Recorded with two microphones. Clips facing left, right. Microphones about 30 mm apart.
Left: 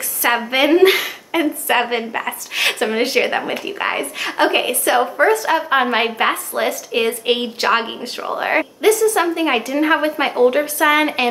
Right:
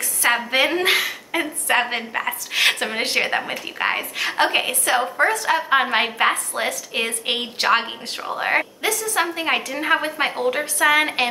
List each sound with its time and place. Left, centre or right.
0.2 s a woman's voice: centre
9.1 s a woman's voice: centre